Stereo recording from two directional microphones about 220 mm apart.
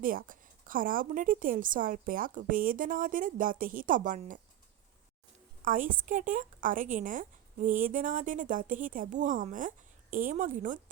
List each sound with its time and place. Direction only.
0.0 s a woman's voice: 40° right (ahead or behind)
5.6 s a woman's voice: 35° right (ahead or behind)